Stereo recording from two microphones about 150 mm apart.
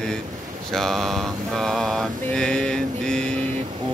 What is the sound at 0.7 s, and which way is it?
Mantra, centre (ahead or behind).